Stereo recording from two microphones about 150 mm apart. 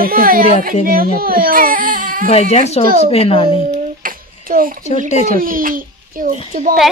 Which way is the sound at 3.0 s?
40° left (ahead or behind).